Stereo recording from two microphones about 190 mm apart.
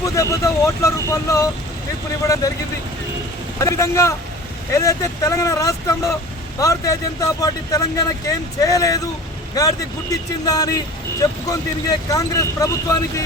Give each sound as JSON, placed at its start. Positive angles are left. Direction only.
{"t": 0.0, "sound": "speech", "side_deg": 15}
{"t": 3.6, "sound": "speech", "side_deg": 15}